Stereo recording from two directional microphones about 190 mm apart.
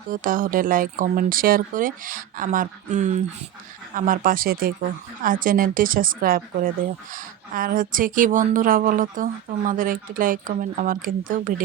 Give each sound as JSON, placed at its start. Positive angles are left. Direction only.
{"t": 0.1, "sound": "speech", "side_deg": -45}